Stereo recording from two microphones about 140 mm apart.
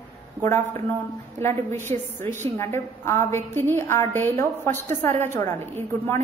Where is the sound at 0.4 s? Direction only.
15° left (ahead or behind).